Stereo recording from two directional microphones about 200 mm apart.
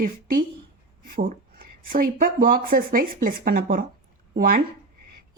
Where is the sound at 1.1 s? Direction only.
45° right (ahead or behind).